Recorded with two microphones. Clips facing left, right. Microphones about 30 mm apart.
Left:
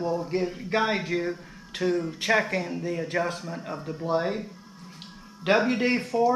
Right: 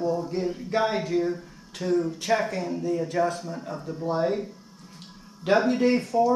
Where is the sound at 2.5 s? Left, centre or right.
Left.